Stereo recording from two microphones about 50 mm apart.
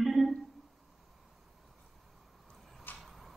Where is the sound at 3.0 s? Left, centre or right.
Centre.